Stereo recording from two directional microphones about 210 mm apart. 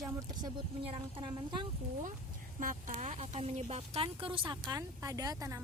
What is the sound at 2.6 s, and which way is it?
A woman's voice, 40° right (ahead or behind).